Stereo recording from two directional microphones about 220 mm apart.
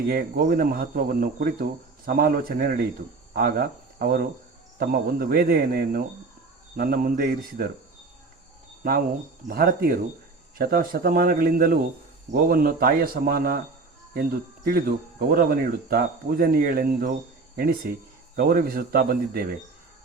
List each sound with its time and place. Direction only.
0.1 s speech: 40° right (ahead or behind)
9.5 s speech: 40° right (ahead or behind)